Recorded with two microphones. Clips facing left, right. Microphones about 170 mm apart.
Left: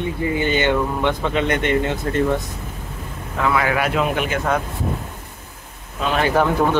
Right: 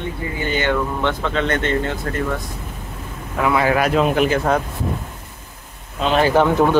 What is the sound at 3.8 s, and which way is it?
Speech, 35° right (ahead or behind).